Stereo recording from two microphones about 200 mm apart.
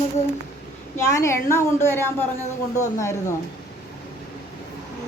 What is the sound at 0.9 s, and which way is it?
A woman's voice, 15° left (ahead or behind).